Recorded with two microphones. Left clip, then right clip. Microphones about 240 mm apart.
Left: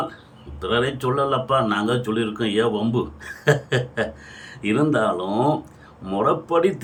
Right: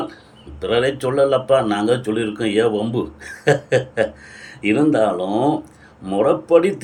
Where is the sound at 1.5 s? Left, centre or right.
Centre.